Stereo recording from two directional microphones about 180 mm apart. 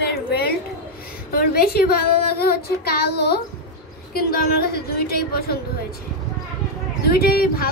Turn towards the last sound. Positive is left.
turn(degrees=55)  # may be behind; listen again after turning